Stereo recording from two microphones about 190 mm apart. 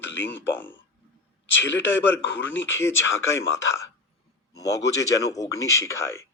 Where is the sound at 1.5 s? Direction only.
75° left (ahead or behind).